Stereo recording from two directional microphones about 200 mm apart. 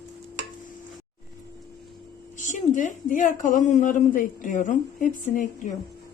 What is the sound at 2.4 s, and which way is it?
A woman's voice, 40° left (ahead or behind).